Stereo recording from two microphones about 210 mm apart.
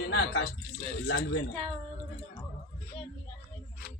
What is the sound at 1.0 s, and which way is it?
Speech, 70° left (ahead or behind).